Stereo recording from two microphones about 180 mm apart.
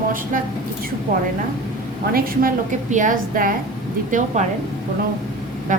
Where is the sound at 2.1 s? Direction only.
50° right (ahead or behind).